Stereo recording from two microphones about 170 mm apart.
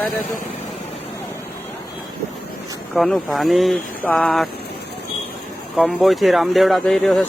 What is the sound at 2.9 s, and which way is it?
Speech, centre (ahead or behind).